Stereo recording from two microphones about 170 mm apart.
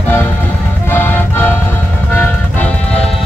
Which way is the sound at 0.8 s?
10° left (ahead or behind).